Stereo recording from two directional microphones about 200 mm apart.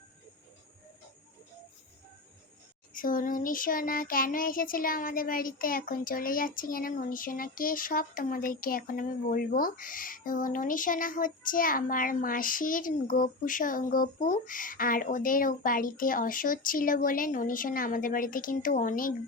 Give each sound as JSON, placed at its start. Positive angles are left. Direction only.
{"t": 2.9, "sound": "child singing", "side_deg": 45}